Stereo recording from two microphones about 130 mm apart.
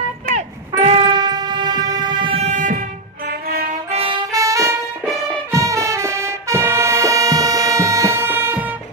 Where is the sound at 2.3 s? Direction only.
65° right (ahead or behind).